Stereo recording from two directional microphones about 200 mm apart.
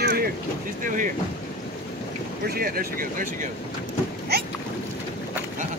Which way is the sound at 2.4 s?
50° right (ahead or behind).